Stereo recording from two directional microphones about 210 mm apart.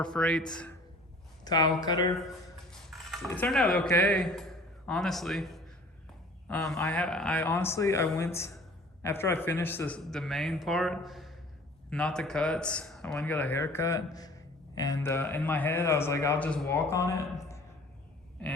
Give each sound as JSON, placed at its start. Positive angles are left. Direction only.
{"t": 0.0, "sound": "a man's voice", "side_deg": 5}
{"t": 1.5, "sound": "speech", "side_deg": 20}
{"t": 2.6, "sound": "a man's voice", "side_deg": 0}